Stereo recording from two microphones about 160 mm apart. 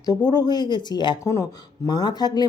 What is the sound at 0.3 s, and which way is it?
Speech, 25° left (ahead or behind).